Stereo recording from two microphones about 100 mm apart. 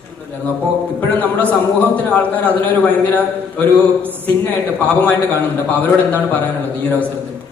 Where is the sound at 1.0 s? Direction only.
15° left (ahead or behind).